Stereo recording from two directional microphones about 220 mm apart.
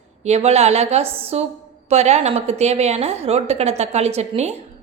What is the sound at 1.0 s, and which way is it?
Speech, 10° right (ahead or behind).